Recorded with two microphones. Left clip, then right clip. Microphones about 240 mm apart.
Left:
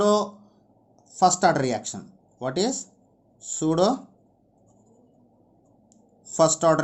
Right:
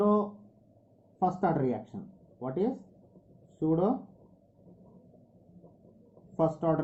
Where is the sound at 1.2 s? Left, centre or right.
Left.